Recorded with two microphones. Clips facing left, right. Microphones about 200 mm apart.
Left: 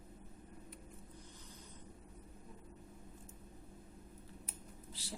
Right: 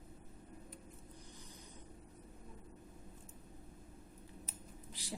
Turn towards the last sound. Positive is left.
turn(degrees=-15)  # may be behind; listen again after turning